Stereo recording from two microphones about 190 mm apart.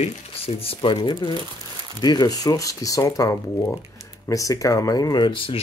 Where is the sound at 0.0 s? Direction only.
35° left (ahead or behind).